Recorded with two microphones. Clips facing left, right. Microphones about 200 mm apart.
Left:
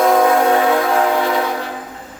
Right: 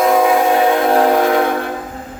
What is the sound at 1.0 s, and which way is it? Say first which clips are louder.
Train: right 4 dB; 50° right (ahead or behind).